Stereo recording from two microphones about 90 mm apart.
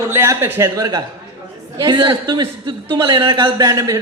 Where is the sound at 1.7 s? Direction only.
50° right (ahead or behind).